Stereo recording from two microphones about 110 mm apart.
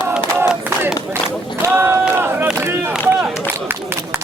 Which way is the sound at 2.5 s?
20° right (ahead or behind).